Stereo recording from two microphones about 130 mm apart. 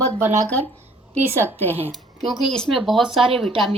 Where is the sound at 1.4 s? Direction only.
15° left (ahead or behind).